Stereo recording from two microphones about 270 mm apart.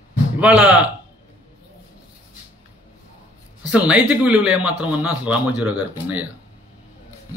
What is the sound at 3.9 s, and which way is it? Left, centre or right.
A man's voice, centre.